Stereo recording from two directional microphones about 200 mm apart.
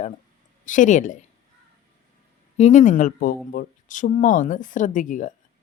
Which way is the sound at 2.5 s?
35° left (ahead or behind).